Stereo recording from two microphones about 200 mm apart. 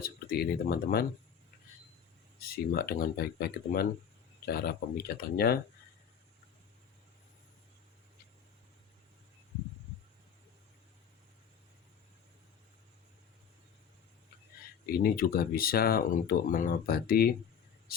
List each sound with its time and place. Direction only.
0.0 s speech: 50° left (ahead or behind)
2.4 s speech: 50° left (ahead or behind)
14.8 s speech: 50° left (ahead or behind)